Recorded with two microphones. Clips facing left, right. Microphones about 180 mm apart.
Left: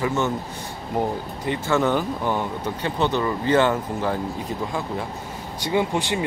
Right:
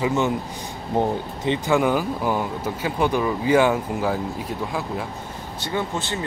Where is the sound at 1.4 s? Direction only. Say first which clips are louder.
Right 2 dB; 20° right (ahead or behind); by 5.0 s 5° right (ahead or behind).